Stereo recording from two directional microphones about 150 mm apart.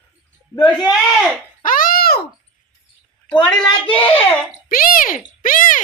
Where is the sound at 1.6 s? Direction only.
70° left (ahead or behind); by 2.2 s 90° left.